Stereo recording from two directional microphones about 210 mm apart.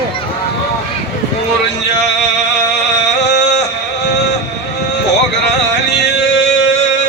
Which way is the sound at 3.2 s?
55° left (ahead or behind).